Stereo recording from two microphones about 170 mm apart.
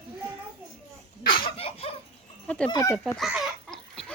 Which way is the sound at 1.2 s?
30° left (ahead or behind).